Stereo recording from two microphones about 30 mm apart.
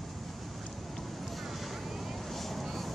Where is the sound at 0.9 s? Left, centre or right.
Centre.